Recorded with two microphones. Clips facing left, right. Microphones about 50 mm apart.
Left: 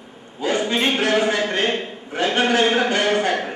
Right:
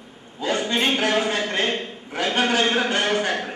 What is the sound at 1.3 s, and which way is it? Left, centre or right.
A man's voice, left.